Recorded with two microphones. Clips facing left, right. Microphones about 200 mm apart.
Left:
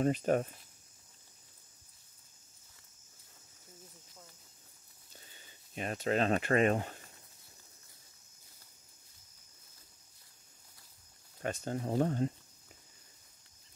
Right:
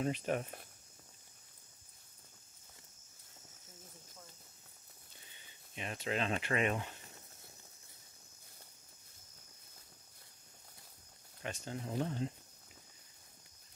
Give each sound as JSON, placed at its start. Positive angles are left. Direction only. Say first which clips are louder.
{"t": 0.0, "sound": "speech", "louder": "left 6 dB", "side_deg": 45}
{"t": 5.8, "sound": "speech", "louder": "left 6 dB", "side_deg": 45}
{"t": 11.4, "sound": "speech", "louder": "left 7 dB", "side_deg": 45}